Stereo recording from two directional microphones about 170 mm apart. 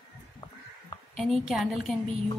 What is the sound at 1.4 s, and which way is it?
Speech, centre (ahead or behind).